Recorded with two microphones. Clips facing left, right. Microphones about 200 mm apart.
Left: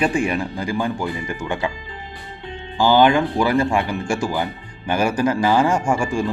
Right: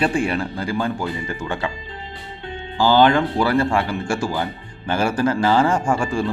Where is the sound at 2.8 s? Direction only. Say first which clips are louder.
Even; 15° left (ahead or behind).